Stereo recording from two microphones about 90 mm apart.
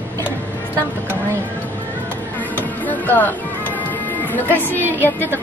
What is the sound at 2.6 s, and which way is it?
Music, 20° left (ahead or behind).